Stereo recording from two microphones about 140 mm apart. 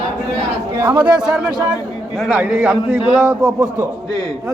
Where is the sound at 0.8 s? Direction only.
15° right (ahead or behind).